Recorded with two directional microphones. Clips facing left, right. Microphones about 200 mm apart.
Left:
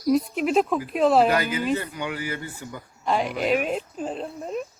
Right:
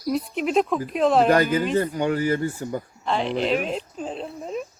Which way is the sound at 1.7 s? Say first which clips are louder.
Right 5 dB; 40° right (ahead or behind).